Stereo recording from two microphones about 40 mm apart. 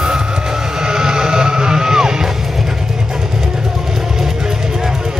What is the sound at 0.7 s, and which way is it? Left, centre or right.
Music, centre.